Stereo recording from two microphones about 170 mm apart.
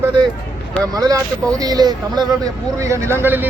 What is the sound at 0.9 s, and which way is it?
Speech, 20° right (ahead or behind).